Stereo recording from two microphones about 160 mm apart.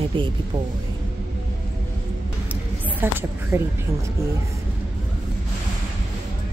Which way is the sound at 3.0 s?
15° right (ahead or behind).